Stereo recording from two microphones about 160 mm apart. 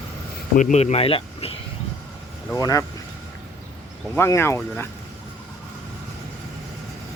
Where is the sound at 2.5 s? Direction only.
20° left (ahead or behind).